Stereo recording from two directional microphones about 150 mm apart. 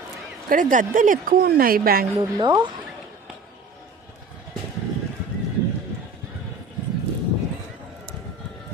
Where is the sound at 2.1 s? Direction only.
25° right (ahead or behind).